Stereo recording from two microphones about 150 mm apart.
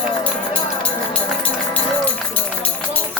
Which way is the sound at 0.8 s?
10° left (ahead or behind).